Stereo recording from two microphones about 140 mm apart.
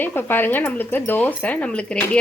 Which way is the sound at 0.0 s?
15° left (ahead or behind).